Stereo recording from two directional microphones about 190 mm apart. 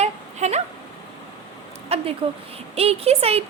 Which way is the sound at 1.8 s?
30° right (ahead or behind).